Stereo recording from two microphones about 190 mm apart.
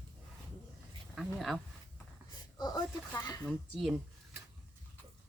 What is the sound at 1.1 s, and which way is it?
Speech, centre (ahead or behind).